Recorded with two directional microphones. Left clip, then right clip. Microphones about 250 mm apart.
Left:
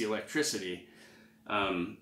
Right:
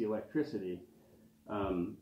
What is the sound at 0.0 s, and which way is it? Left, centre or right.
Speech, left.